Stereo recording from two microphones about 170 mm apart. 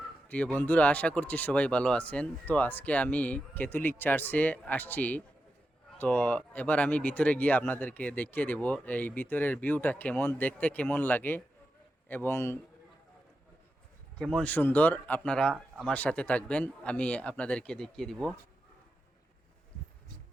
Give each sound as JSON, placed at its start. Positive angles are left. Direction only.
{"t": 0.3, "sound": "speech", "side_deg": 10}
{"t": 14.3, "sound": "speech", "side_deg": 10}